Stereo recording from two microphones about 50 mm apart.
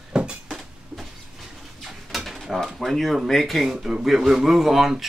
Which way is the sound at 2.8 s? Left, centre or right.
Centre.